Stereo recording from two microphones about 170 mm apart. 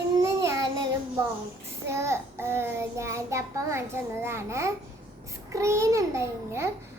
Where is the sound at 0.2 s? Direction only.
20° right (ahead or behind).